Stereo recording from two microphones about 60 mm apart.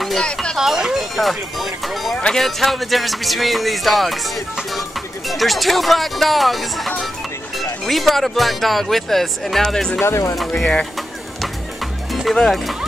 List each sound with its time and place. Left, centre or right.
0.0 s a sound: centre
0.6 s speech: centre
5.3 s speech: centre
10.0 s speech: left
10.5 s speech: centre
12.4 s speech: centre